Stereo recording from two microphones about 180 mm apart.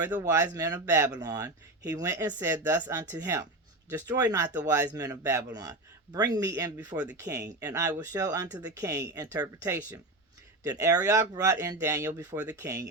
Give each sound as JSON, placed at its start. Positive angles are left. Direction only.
{"t": 0.2, "sound": "speech", "side_deg": -15}